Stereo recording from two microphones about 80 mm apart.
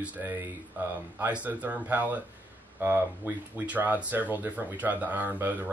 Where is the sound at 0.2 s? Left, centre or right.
Right.